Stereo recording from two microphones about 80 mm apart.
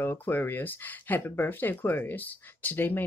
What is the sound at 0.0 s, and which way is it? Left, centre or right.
Speech, left.